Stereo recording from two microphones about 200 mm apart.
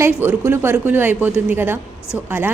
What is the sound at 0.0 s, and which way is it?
A woman's voice, 10° right (ahead or behind).